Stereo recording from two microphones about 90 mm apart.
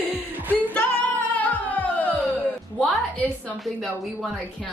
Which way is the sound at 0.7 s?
15° left (ahead or behind).